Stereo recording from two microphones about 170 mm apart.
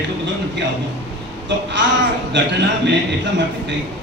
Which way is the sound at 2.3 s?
90° right.